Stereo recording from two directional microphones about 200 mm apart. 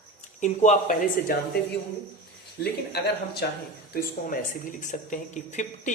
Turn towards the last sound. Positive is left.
turn(degrees=35)  # may be behind; listen again after turning